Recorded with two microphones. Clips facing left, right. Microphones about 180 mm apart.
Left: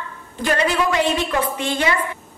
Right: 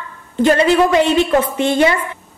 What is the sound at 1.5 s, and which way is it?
Speech, 25° right (ahead or behind).